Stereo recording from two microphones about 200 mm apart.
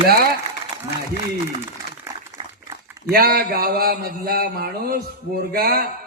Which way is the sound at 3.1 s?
50° right (ahead or behind).